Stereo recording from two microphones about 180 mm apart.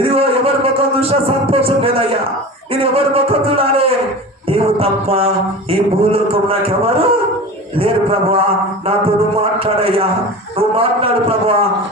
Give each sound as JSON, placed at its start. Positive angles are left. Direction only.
{"t": 0.1, "sound": "a sound", "side_deg": -30}
{"t": 2.8, "sound": "a man's voice", "side_deg": -30}
{"t": 9.4, "sound": "a man's voice", "side_deg": -30}